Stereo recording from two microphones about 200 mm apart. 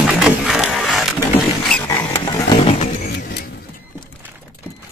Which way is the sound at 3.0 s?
55° left (ahead or behind).